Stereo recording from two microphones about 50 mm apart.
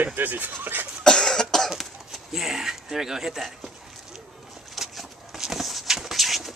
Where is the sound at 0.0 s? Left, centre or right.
Right.